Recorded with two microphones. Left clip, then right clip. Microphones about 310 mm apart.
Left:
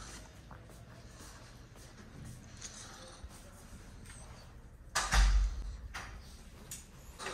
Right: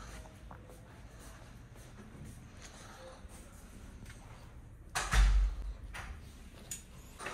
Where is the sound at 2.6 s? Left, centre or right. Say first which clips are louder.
Left 3 dB; centre.